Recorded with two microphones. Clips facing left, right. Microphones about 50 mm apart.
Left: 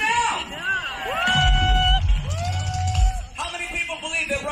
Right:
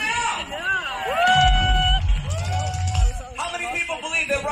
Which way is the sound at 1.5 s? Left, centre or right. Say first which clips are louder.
Even; centre.